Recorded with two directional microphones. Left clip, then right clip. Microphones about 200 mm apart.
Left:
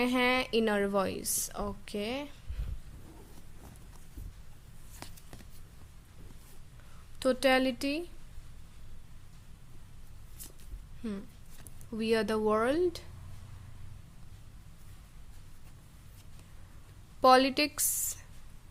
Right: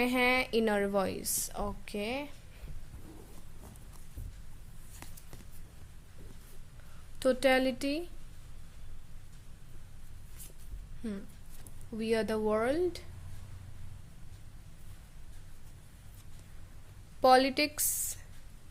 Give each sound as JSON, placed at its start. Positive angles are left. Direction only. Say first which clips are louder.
{"t": 0.0, "sound": "a woman's voice", "louder": "even", "side_deg": 10}
{"t": 5.0, "sound": "a sound", "louder": "left 4 dB", "side_deg": 20}
{"t": 7.2, "sound": "a woman's voice", "louder": "even", "side_deg": 5}
{"t": 11.0, "sound": "a woman's voice", "louder": "left 1 dB", "side_deg": 10}
{"t": 17.2, "sound": "a woman's voice", "louder": "left 1 dB", "side_deg": 10}